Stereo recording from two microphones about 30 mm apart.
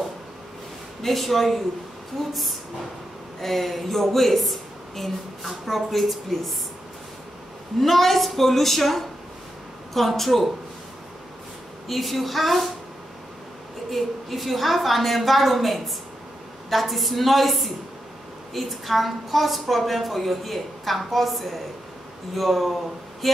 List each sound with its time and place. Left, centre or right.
1.0 s a woman's voice: centre
3.3 s a woman's voice: centre
7.8 s a woman's voice: centre
11.9 s a woman's voice: centre
13.8 s a woman's voice: centre
23.2 s a sound: centre